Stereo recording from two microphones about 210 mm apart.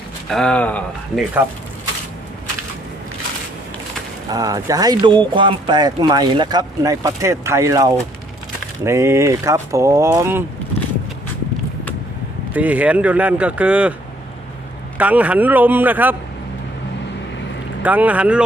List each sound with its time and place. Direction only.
0.3 s speech: 5° left (ahead or behind)
4.3 s speech: 15° right (ahead or behind)
12.5 s speech: 5° right (ahead or behind)
14.9 s speech: 5° right (ahead or behind)
17.8 s speech: 5° right (ahead or behind)